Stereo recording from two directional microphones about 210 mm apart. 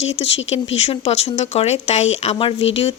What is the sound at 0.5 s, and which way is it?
A woman's voice, 30° left (ahead or behind).